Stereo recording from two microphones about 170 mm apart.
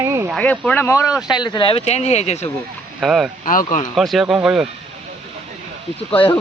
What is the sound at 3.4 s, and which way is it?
Speech, 50° left (ahead or behind).